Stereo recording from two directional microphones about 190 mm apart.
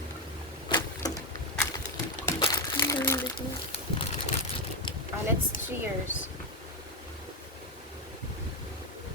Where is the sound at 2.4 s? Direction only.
20° left (ahead or behind).